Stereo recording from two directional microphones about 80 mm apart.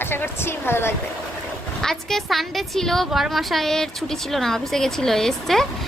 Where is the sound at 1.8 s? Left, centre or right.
Centre.